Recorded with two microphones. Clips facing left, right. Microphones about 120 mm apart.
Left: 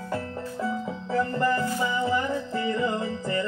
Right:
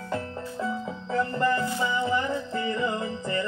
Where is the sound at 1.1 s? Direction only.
20° right (ahead or behind).